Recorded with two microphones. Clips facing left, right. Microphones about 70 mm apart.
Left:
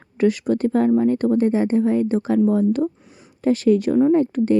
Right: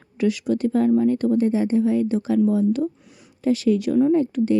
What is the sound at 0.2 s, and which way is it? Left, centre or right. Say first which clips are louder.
Speech: left 3 dB; left.